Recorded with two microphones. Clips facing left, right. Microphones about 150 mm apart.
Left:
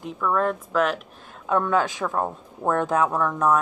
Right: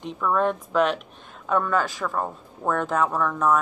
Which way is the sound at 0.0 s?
Centre (ahead or behind).